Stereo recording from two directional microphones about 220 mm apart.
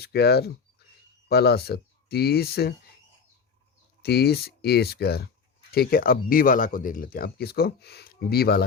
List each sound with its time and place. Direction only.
0.0 s speech: 45° left (ahead or behind)
4.0 s speech: 45° left (ahead or behind)